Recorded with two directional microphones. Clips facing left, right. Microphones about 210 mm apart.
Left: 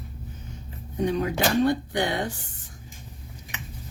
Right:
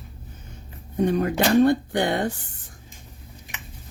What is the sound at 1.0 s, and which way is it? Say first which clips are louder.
Speech: right 3 dB; 55° right (ahead or behind).